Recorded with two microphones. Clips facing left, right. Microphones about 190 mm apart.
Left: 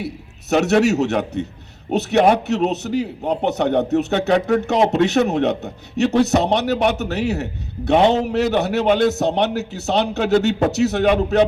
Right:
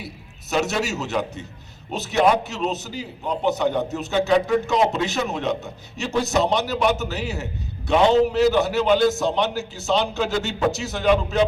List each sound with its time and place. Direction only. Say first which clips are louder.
0.5 s a man's voice: left 8 dB; 65° left (ahead or behind)